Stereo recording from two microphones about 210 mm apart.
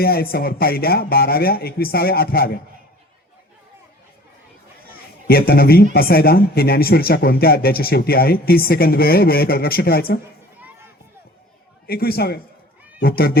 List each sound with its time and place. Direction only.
0.0 s speech: 45° left (ahead or behind)
4.9 s speech: 45° left (ahead or behind)
10.6 s a sound: 10° right (ahead or behind)
11.9 s speech: 45° left (ahead or behind)